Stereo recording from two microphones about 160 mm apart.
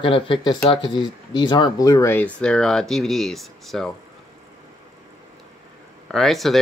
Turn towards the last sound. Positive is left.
turn(degrees=0)  # may be behind; listen again after turning